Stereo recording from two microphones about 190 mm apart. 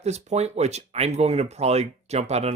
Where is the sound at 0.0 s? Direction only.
35° right (ahead or behind).